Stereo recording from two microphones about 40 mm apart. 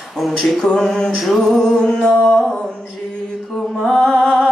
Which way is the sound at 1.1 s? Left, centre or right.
Centre.